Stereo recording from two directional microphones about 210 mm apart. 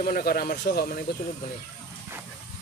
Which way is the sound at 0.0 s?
45° left (ahead or behind).